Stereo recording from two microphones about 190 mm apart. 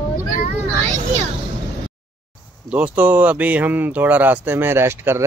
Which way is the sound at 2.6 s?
5° right (ahead or behind).